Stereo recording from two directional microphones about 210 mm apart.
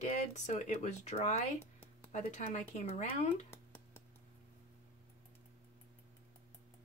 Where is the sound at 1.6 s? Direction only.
10° left (ahead or behind).